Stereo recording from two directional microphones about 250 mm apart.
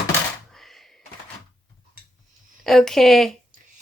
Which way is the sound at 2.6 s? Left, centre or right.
Centre.